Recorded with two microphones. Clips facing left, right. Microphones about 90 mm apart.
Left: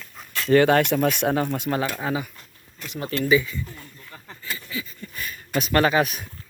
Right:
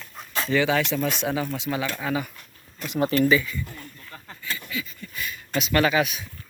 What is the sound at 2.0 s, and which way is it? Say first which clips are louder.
Speech: right 3 dB; 30° left (ahead or behind).